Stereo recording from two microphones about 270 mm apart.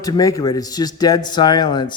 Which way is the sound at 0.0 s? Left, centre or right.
Centre.